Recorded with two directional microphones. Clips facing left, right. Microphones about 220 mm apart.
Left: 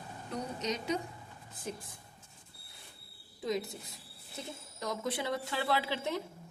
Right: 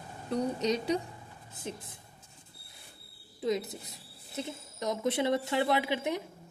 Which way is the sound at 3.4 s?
20° right (ahead or behind).